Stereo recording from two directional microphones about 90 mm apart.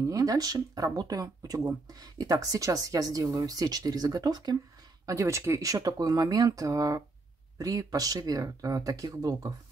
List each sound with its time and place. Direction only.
0.0 s speech: 40° right (ahead or behind)
5.0 s speech: 40° right (ahead or behind)